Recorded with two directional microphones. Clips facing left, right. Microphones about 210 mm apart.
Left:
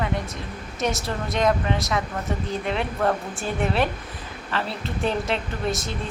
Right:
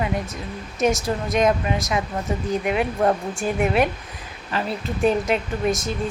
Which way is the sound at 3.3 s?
5° right (ahead or behind).